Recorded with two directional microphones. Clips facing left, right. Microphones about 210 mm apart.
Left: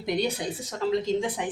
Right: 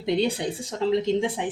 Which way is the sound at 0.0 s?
25° right (ahead or behind).